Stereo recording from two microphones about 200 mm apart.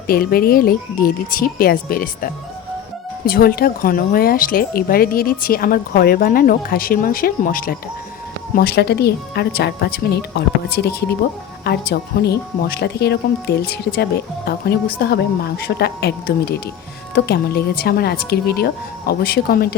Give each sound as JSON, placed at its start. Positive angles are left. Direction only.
{"t": 0.1, "sound": "speech", "side_deg": 50}